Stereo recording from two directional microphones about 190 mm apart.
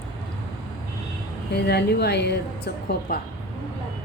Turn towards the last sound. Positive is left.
turn(degrees=60)  # may be behind; listen again after turning